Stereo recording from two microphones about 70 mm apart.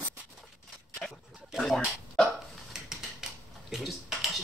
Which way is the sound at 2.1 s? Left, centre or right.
Centre.